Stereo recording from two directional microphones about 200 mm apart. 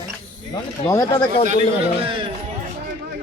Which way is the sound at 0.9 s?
15° left (ahead or behind).